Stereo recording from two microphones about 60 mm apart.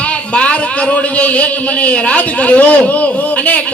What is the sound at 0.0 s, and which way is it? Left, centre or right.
A man's voice, centre.